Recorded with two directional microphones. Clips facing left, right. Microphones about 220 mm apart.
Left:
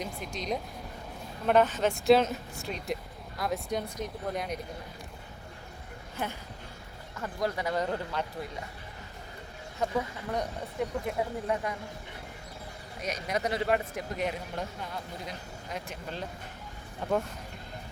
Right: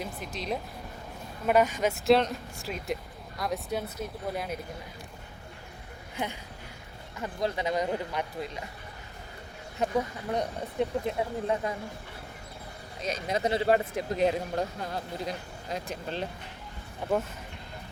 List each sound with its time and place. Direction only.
0.0 s speech: centre (ahead or behind)
7.2 s speech: 20° right (ahead or behind)
10.3 s speech: 25° right (ahead or behind)
13.0 s speech: 25° right (ahead or behind)
17.0 s speech: 10° right (ahead or behind)